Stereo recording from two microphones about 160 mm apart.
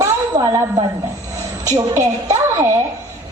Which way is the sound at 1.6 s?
20° right (ahead or behind).